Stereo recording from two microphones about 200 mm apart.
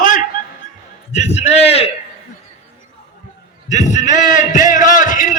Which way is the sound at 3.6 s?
35° left (ahead or behind).